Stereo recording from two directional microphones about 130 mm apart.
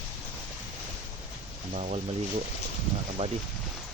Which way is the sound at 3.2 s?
50° right (ahead or behind).